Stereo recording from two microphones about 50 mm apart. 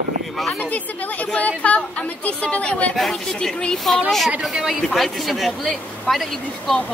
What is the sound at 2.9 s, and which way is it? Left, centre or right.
A man's voice, centre.